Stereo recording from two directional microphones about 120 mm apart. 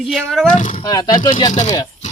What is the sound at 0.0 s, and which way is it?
Speech, 5° right (ahead or behind).